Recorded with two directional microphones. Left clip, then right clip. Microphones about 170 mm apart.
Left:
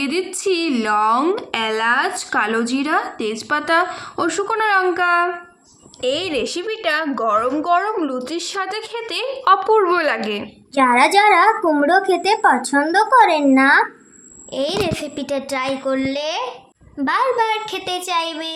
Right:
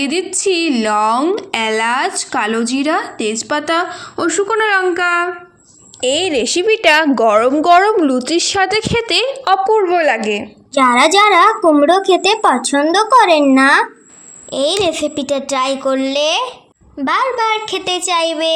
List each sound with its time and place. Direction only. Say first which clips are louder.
0.0 s speech: right 4 dB; 15° right (ahead or behind)
6.7 s a woman's voice: right 13 dB; 35° right (ahead or behind)
9.7 s a woman's voice: right 3 dB; centre (ahead or behind); by 18.5 s 30° right (ahead or behind)